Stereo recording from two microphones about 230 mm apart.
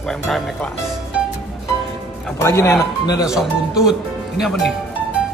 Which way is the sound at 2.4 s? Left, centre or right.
Centre.